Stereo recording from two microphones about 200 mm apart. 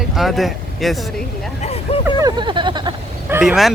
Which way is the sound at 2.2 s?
25° right (ahead or behind).